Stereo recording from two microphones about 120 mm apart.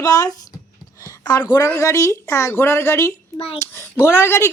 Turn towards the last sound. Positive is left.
turn(degrees=20)  # may be behind; listen again after turning